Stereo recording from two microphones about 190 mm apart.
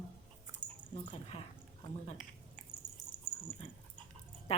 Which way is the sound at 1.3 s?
35° left (ahead or behind).